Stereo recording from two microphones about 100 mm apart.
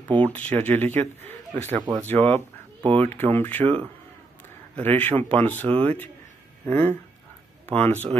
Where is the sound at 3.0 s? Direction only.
20° left (ahead or behind).